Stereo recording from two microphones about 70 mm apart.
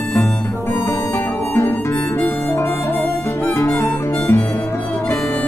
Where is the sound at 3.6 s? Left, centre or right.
Left.